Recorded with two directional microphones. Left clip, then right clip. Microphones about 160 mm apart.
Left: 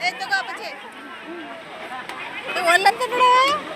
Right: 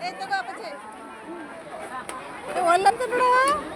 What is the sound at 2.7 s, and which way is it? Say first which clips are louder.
Speech: left 3 dB; 90° right.